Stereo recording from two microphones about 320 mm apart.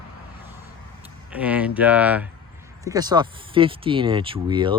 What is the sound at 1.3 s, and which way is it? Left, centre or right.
Speech, centre.